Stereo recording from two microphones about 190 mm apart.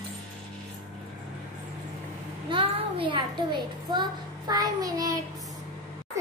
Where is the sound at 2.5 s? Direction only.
25° right (ahead or behind).